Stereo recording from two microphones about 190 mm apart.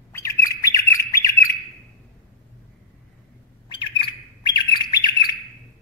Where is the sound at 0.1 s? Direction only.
15° left (ahead or behind).